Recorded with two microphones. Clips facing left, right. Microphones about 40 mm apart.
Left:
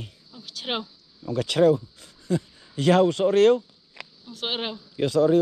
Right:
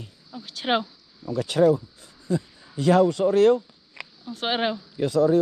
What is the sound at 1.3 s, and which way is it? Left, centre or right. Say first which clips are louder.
Speech: even; left.